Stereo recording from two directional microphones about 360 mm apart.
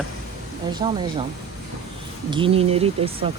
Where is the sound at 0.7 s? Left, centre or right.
Centre.